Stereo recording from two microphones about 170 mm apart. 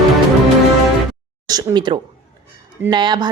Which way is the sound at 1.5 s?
25° right (ahead or behind).